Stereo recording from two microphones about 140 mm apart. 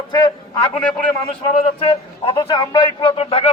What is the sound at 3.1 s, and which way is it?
Speech, 45° left (ahead or behind).